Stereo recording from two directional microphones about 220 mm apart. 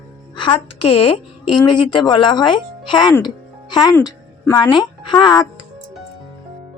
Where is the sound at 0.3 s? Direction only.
25° left (ahead or behind).